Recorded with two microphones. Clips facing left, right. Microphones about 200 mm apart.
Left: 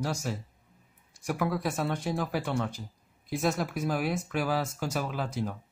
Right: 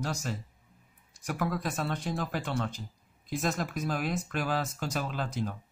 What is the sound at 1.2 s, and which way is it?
Speech, 10° left (ahead or behind).